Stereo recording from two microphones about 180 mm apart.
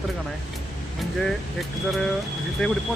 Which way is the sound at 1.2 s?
Centre (ahead or behind).